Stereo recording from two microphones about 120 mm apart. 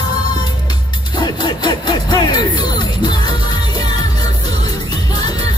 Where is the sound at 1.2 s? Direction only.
35° left (ahead or behind).